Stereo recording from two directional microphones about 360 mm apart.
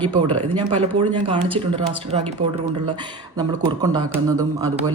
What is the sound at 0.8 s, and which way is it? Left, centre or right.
Speech, centre.